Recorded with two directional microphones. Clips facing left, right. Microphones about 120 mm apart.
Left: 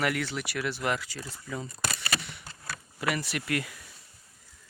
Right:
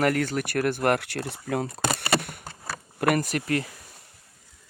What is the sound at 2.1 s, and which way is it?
Bee, 50° right (ahead or behind).